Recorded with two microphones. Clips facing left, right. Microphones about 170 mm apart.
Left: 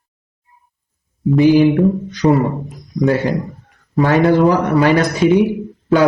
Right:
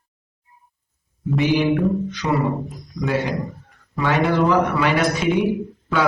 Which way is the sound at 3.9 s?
40° left (ahead or behind).